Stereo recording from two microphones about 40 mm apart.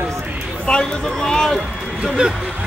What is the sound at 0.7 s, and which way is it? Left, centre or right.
Speech, left.